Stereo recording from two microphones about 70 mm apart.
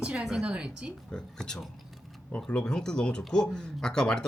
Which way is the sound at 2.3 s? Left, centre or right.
Centre.